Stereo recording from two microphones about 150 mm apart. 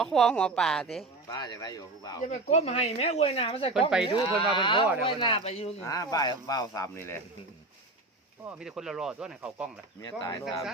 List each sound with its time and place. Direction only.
0.0 s speech: 5° left (ahead or behind)
1.3 s speech: 30° left (ahead or behind)
2.3 s speech: 50° left (ahead or behind)
5.8 s speech: 25° left (ahead or behind)
8.4 s speech: 5° right (ahead or behind)
10.0 s speech: 30° left (ahead or behind)